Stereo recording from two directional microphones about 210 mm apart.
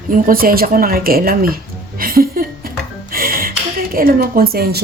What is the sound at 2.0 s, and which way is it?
Music, 45° right (ahead or behind).